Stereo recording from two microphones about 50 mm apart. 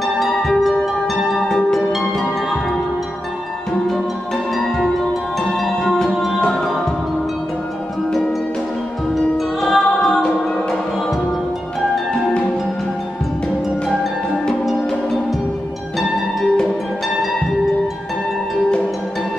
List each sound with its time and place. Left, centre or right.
0.0 s music: centre
1.9 s music: centre
6.4 s music: centre
9.1 s music: centre